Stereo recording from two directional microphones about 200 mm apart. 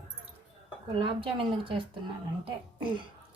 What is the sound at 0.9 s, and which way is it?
Speech, 25° right (ahead or behind).